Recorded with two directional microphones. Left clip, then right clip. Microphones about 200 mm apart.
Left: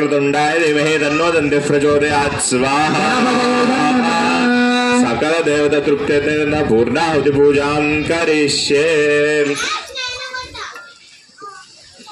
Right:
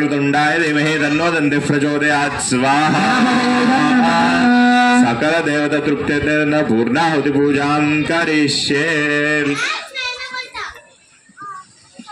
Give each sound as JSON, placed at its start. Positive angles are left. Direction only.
{"t": 0.0, "sound": "a man's voice", "side_deg": -50}